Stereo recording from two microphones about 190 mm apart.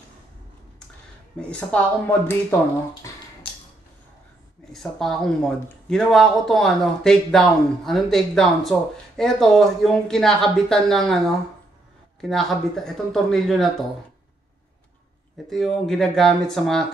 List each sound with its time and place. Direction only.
1.4 s speech: 5° left (ahead or behind)
3.4 s a sound: 30° left (ahead or behind)
4.7 s speech: centre (ahead or behind)
15.5 s speech: centre (ahead or behind)